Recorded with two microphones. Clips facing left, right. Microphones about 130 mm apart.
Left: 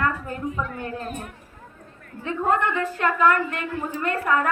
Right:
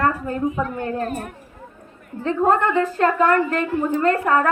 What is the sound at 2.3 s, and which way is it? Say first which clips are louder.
A woman's voice: right 5 dB; 40° right (ahead or behind).